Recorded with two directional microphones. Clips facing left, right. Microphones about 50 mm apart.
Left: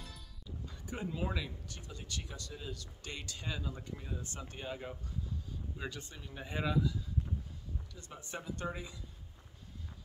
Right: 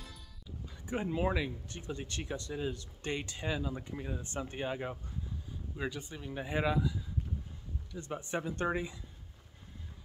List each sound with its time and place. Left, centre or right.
0.8 s speech: right
5.8 s speech: centre
7.9 s speech: right